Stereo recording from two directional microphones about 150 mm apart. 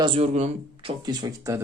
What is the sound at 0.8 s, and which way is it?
Speech, 30° right (ahead or behind).